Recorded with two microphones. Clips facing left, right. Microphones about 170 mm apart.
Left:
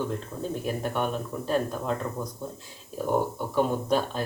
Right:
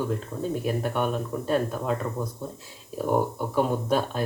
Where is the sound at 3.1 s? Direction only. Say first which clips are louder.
Right 2 dB; 10° right (ahead or behind).